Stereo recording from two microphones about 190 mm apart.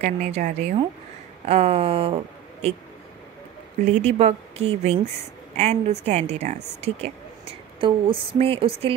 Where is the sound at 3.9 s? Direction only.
35° right (ahead or behind).